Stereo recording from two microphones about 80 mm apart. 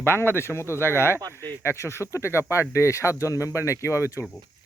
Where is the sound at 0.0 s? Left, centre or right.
Left.